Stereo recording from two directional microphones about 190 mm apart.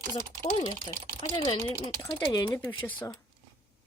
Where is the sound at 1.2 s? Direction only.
25° left (ahead or behind).